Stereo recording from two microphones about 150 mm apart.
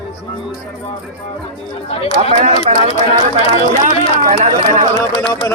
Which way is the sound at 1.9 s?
40° left (ahead or behind).